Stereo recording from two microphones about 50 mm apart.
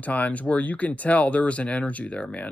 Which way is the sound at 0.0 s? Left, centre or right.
Left.